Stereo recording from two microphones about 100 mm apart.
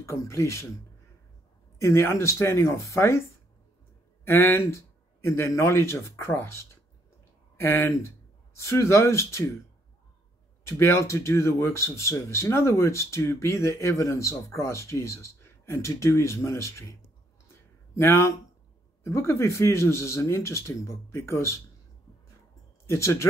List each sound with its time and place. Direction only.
0.0 s speech: 30° left (ahead or behind)
1.8 s speech: 25° left (ahead or behind)
10.6 s speech: 30° left (ahead or behind)
17.9 s speech: 25° left (ahead or behind)
22.8 s speech: 30° left (ahead or behind)